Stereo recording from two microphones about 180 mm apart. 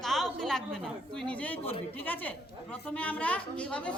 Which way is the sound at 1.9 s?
10° left (ahead or behind).